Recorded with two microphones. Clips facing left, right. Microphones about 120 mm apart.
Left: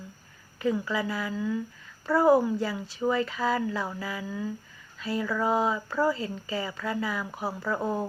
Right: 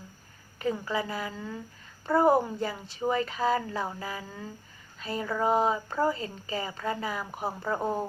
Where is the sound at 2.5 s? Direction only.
45° right (ahead or behind).